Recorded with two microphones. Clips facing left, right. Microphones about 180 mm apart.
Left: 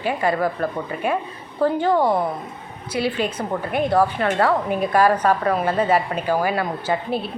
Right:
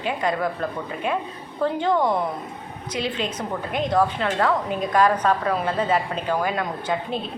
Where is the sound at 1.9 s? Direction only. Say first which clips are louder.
Left 1 dB; 30° left (ahead or behind).